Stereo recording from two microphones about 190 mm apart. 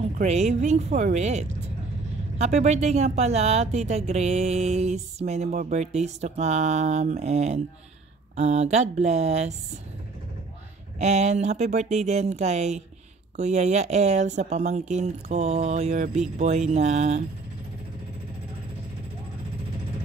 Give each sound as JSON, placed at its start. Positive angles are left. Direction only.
{"t": 0.2, "sound": "speech", "side_deg": -35}
{"t": 11.0, "sound": "speech", "side_deg": -35}